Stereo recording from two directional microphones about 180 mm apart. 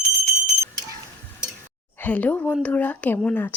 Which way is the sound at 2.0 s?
10° left (ahead or behind).